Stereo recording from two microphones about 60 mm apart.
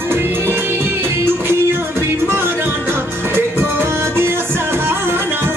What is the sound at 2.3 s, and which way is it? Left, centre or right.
Music, right.